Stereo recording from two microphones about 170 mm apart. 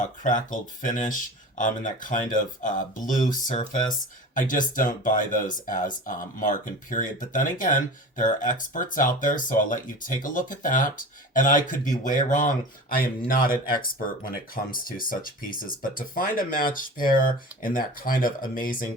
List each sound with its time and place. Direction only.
0.0 s speech: 50° left (ahead or behind)